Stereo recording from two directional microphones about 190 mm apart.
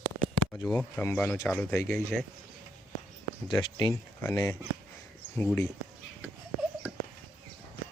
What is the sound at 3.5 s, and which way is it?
Speech, 25° left (ahead or behind).